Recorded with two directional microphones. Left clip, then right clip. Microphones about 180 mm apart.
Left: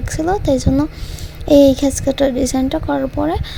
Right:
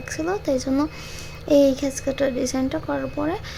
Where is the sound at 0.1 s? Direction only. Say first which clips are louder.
Left 7 dB; 25° left (ahead or behind).